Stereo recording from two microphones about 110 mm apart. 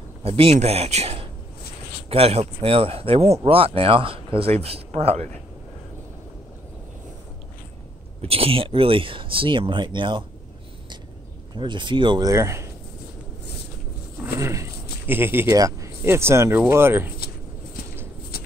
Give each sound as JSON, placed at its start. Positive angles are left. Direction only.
{"t": 0.2, "sound": "speech", "side_deg": -60}
{"t": 8.2, "sound": "speech", "side_deg": -60}
{"t": 11.5, "sound": "speech", "side_deg": -45}
{"t": 12.3, "sound": "speech", "side_deg": -25}
{"t": 14.2, "sound": "a sound", "side_deg": -25}
{"t": 15.5, "sound": "speech", "side_deg": -30}